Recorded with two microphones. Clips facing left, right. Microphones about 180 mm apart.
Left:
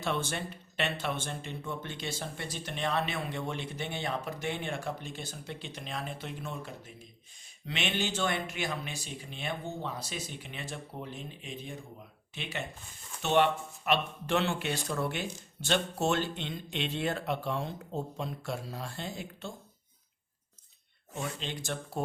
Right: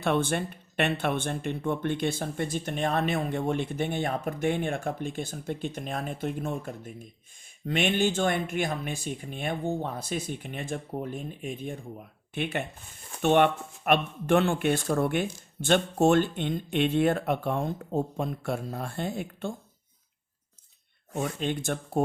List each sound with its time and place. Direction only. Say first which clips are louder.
0.0 s speech: right 7 dB; 55° right (ahead or behind)
21.2 s speech: right 8 dB; 50° right (ahead or behind)